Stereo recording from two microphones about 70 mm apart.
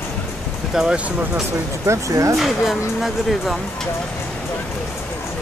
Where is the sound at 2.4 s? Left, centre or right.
Centre.